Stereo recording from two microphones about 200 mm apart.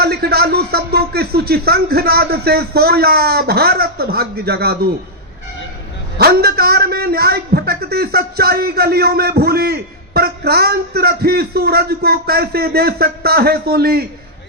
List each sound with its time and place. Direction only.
0.0 s a man's voice: 50° right (ahead or behind)
6.1 s a man's voice: 50° right (ahead or behind)